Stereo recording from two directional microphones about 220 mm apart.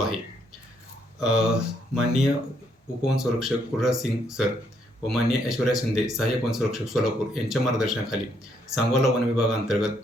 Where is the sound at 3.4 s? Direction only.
Centre (ahead or behind).